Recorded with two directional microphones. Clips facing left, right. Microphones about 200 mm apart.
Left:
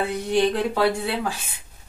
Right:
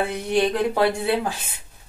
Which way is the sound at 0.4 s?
15° right (ahead or behind).